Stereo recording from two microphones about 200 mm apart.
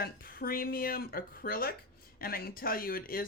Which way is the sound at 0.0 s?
50° left (ahead or behind).